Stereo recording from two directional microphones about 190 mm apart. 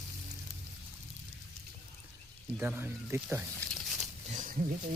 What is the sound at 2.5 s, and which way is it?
Speech, 10° right (ahead or behind).